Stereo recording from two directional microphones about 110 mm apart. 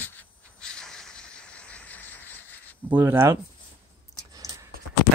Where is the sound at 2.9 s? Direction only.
25° right (ahead or behind).